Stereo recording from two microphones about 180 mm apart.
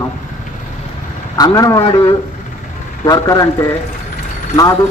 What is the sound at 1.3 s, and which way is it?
Speech, 20° left (ahead or behind).